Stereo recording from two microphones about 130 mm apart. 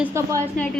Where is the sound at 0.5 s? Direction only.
10° left (ahead or behind).